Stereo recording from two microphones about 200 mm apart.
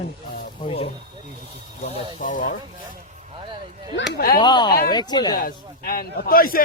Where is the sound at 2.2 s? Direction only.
40° left (ahead or behind).